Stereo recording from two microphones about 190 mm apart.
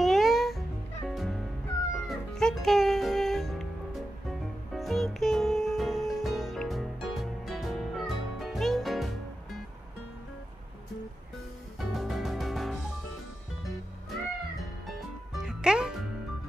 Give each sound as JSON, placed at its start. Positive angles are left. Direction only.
{"t": 0.0, "sound": "music", "side_deg": 0}
{"t": 11.8, "sound": "music", "side_deg": 0}
{"t": 15.3, "sound": "music", "side_deg": -5}